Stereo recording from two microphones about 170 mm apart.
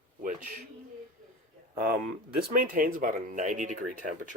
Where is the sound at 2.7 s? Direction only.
55° right (ahead or behind).